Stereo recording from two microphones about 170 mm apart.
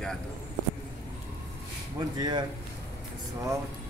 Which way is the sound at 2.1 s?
25° right (ahead or behind).